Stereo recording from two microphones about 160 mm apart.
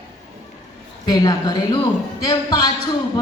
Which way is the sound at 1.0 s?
25° left (ahead or behind).